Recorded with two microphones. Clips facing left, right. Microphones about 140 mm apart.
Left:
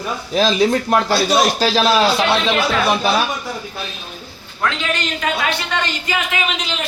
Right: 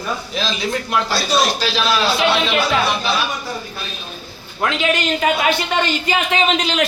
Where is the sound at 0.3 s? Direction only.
40° left (ahead or behind).